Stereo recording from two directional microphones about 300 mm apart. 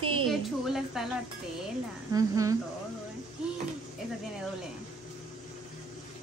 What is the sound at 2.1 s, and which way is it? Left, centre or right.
Speech, centre.